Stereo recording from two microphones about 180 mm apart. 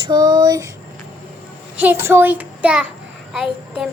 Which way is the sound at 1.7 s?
10° right (ahead or behind).